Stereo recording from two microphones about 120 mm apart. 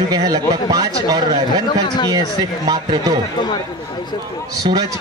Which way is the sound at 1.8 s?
35° left (ahead or behind).